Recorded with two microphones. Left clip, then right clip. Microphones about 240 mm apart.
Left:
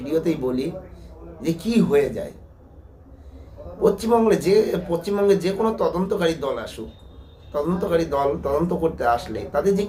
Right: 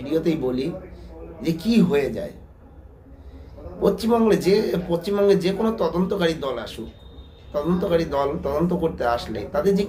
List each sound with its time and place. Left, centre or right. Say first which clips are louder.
0.0 s a man's voice: even; centre
3.8 s speech: left 2 dB; centre
8.1 s speech: left 2 dB; centre